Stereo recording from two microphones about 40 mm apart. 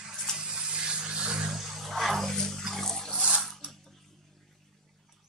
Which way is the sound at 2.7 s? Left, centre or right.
Centre.